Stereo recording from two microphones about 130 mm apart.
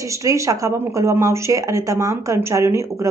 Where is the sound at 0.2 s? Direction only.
25° right (ahead or behind).